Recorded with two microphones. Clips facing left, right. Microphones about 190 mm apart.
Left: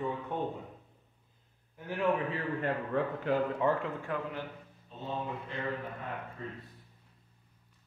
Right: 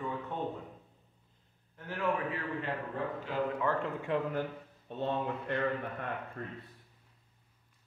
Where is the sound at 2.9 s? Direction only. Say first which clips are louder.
Left 6 dB; 70° left (ahead or behind).